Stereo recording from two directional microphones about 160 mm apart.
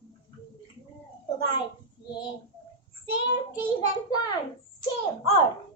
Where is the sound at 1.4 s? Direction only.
30° left (ahead or behind).